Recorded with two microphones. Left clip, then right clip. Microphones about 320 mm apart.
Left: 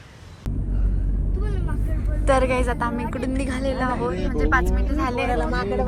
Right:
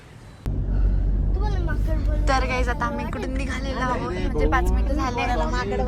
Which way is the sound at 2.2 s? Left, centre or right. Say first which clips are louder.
Left 4 dB; centre.